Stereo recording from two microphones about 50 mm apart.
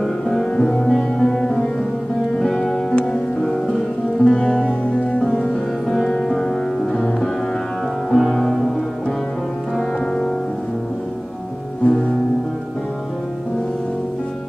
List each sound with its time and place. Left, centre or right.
0.0 s music: centre
8.1 s music: centre
9.8 s music: centre
11.8 s music: centre